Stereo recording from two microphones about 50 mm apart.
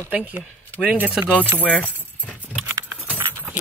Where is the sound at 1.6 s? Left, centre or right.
Left.